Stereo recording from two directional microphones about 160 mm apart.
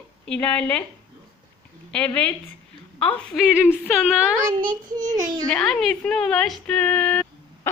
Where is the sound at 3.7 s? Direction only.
Centre (ahead or behind).